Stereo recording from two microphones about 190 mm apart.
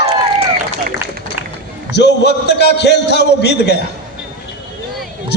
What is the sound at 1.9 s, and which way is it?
A man's voice, 65° left (ahead or behind).